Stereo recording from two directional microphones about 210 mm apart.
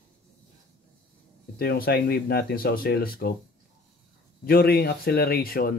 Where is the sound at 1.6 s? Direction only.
45° left (ahead or behind).